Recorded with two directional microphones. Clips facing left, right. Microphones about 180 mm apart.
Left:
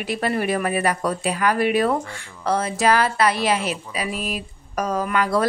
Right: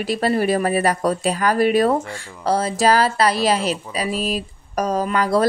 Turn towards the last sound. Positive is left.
turn(degrees=-35)  # may be behind; listen again after turning